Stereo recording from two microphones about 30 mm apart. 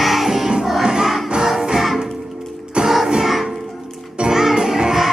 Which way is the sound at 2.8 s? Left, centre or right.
Right.